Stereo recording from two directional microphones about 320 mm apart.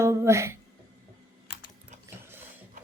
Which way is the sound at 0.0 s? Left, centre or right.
Centre.